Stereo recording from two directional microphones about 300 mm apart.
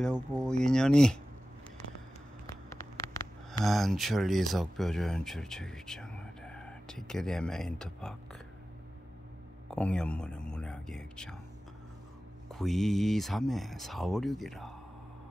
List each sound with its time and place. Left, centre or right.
0.0 s speech: centre
3.6 s speech: centre
9.7 s speech: centre
12.5 s speech: centre